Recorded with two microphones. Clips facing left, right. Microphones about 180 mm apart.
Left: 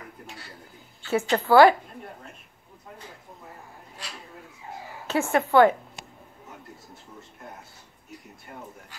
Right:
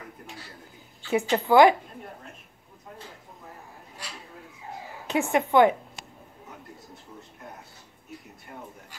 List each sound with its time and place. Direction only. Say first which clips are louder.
1.1 s speech: left 1 dB; 15° right (ahead or behind)
5.0 s a woman's voice: even; 15° right (ahead or behind)